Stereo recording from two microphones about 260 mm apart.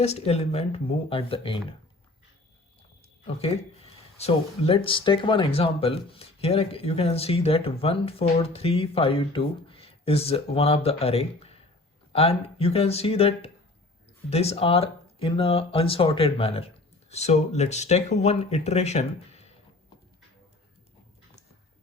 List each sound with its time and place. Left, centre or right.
0.0 s speech: left
3.2 s speech: left